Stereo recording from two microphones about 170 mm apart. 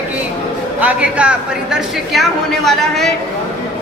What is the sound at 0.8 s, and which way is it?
A woman's voice, 10° right (ahead or behind).